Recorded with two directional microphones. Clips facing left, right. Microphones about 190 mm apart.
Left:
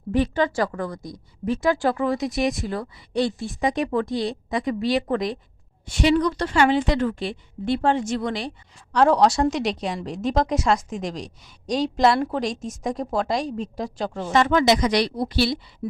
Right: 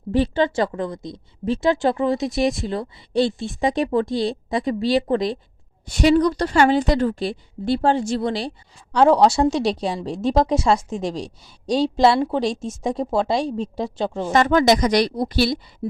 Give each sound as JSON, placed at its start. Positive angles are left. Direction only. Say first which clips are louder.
{"t": 0.1, "sound": "a woman's voice", "louder": "right 2 dB", "side_deg": -30}
{"t": 5.9, "sound": "a woman's voice", "louder": "right 3 dB", "side_deg": -40}
{"t": 14.3, "sound": "speech", "louder": "right 2 dB", "side_deg": -45}
{"t": 15.8, "sound": "a sound", "louder": "right 3 dB", "side_deg": -30}